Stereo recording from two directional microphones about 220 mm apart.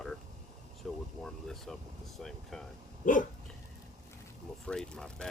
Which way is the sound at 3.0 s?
35° left (ahead or behind).